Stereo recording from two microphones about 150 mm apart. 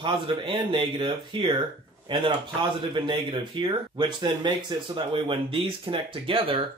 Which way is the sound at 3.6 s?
35° right (ahead or behind).